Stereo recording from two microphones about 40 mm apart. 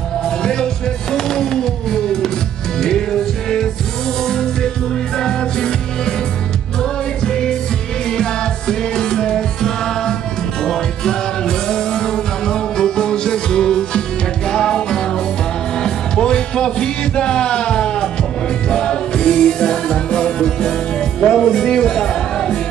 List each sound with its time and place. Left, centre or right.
0.2 s music: centre